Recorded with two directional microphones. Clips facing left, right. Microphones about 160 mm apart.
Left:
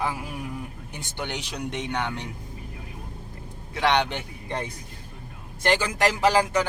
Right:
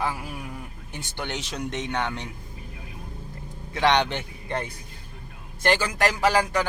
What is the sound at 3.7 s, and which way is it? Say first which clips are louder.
Speech: right 1 dB; 5° left (ahead or behind).